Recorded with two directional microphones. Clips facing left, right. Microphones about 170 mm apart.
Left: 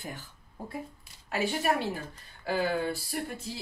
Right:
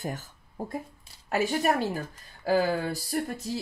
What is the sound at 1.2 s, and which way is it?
Speech, 45° right (ahead or behind).